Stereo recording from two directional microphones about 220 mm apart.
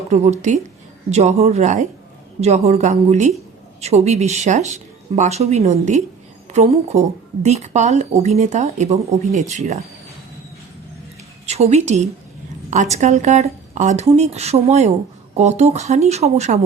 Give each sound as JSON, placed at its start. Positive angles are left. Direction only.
{"t": 0.1, "sound": "speech", "side_deg": -30}
{"t": 11.4, "sound": "a woman's voice", "side_deg": -30}